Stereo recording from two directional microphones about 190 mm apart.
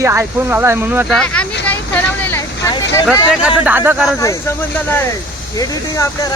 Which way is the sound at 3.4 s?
5° right (ahead or behind).